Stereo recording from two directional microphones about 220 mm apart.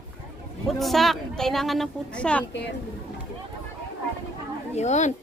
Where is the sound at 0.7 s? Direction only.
Centre (ahead or behind).